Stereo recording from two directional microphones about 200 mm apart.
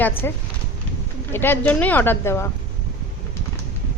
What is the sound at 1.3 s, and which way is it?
A woman's voice, 10° left (ahead or behind).